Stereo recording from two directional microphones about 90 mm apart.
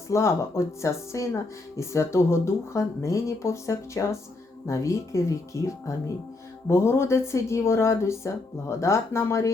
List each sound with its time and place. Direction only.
0.1 s speech: 30° left (ahead or behind)